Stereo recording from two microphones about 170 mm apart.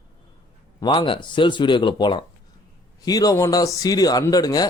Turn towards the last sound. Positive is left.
turn(degrees=20)  # may be behind; listen again after turning